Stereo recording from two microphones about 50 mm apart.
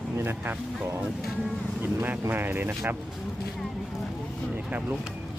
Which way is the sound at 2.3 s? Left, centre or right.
Right.